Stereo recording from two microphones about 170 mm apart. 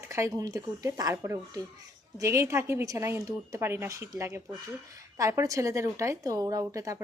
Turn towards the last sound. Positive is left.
turn(degrees=-20)  # may be behind; listen again after turning